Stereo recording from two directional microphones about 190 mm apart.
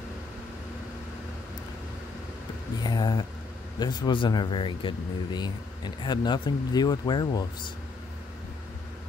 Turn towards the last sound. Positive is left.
turn(degrees=20)  # may be behind; listen again after turning